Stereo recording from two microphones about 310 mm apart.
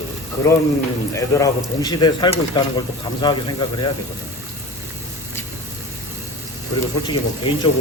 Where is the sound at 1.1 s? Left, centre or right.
Centre.